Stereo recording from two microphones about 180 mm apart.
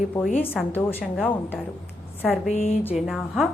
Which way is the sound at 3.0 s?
Centre (ahead or behind).